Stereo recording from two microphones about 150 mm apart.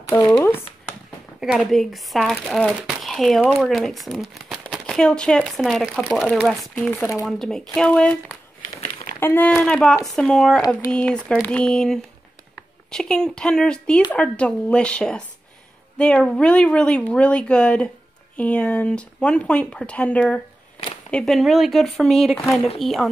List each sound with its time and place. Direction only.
0.4 s a sound: 15° left (ahead or behind)
1.4 s speech: 5° right (ahead or behind)
22.4 s speech: 20° left (ahead or behind)
22.8 s speech: centre (ahead or behind)